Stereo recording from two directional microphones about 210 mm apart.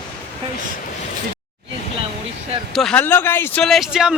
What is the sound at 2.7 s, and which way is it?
Speech, 5° left (ahead or behind).